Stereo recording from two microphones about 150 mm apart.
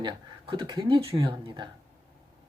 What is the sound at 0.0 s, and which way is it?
Speech, 30° right (ahead or behind).